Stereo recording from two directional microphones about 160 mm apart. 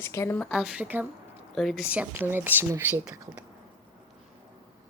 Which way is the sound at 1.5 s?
Centre (ahead or behind).